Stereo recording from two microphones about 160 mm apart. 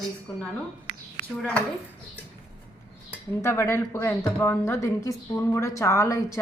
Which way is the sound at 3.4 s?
15° left (ahead or behind).